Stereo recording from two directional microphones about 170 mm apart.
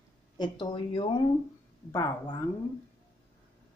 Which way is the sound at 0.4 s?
30° left (ahead or behind).